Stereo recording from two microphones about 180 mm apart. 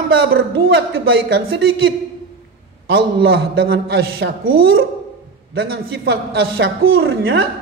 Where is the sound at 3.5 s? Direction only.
60° right (ahead or behind).